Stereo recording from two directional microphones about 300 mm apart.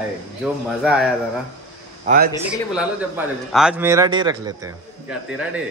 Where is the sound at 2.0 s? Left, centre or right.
Right.